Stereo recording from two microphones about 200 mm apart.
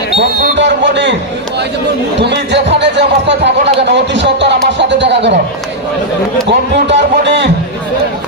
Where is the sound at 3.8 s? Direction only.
60° right (ahead or behind).